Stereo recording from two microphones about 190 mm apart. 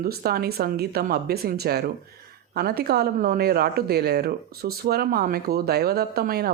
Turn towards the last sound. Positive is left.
turn(degrees=-55)  # may be behind; listen again after turning